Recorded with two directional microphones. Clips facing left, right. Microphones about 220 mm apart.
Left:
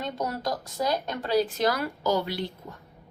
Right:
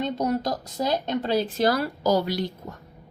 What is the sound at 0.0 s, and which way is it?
A woman's voice, 20° right (ahead or behind).